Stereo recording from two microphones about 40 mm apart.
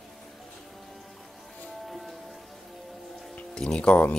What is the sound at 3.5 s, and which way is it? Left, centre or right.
Speech, left.